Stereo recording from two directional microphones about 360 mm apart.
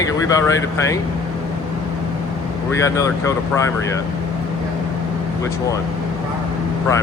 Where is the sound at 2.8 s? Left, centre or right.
Centre.